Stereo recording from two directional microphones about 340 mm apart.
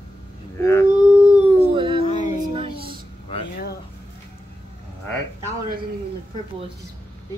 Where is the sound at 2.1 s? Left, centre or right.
Left.